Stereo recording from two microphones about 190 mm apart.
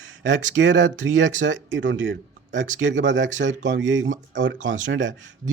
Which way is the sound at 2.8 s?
75° right (ahead or behind).